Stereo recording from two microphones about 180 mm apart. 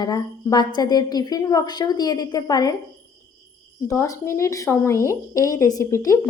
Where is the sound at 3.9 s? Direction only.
15° left (ahead or behind).